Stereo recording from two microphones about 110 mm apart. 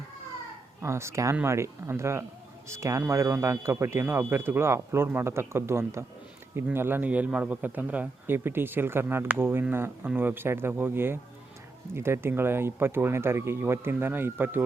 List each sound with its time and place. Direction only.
0.8 s speech: 25° right (ahead or behind)